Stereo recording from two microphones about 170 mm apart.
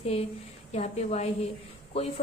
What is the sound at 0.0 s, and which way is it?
A woman's voice, 35° left (ahead or behind).